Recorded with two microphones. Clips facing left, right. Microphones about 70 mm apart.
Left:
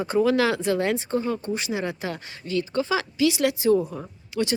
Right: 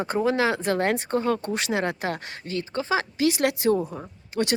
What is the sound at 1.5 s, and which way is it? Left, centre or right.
Speech, right.